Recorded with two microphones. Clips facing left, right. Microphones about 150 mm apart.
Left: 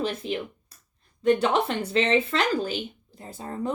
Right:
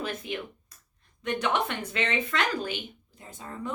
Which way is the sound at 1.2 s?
30° left (ahead or behind).